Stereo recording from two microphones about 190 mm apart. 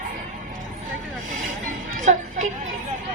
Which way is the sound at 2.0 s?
40° right (ahead or behind).